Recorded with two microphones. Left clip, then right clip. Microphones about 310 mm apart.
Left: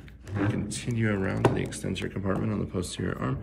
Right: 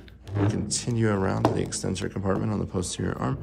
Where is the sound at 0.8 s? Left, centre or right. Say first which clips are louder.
Right 3 dB; centre.